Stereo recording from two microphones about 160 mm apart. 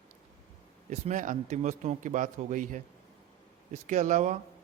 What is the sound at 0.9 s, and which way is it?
A man's voice, 50° right (ahead or behind).